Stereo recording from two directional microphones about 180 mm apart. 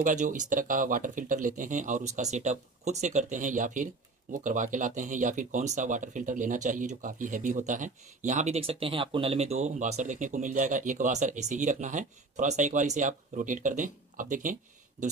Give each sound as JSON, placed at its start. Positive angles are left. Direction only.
{"t": 0.0, "sound": "speech", "side_deg": -45}
{"t": 8.6, "sound": "speech", "side_deg": -30}